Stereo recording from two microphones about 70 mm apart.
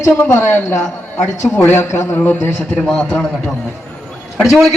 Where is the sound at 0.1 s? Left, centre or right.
Left.